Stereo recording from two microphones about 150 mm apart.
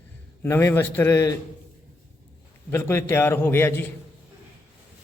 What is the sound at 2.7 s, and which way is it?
A man's voice, 15° left (ahead or behind).